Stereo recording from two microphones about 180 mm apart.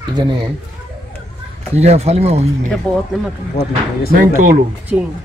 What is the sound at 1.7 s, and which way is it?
Speech, 35° right (ahead or behind).